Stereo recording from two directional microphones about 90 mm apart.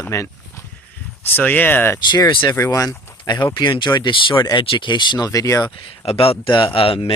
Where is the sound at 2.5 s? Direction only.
35° left (ahead or behind).